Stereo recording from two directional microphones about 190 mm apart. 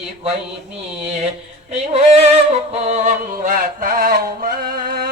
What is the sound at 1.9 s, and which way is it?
Music, 35° right (ahead or behind).